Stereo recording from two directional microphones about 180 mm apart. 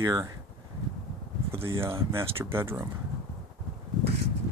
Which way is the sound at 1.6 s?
15° right (ahead or behind).